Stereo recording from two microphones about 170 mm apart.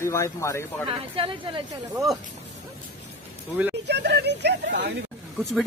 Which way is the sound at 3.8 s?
80° right.